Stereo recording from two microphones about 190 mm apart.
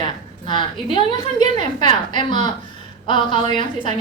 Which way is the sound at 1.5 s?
40° right (ahead or behind).